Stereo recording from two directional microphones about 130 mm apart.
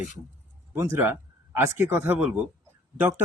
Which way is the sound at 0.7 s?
20° right (ahead or behind).